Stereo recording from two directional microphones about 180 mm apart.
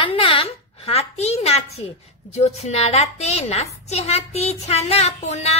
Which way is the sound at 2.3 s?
35° left (ahead or behind).